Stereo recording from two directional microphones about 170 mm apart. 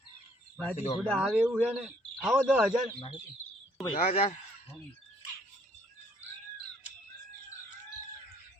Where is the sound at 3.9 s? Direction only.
35° left (ahead or behind).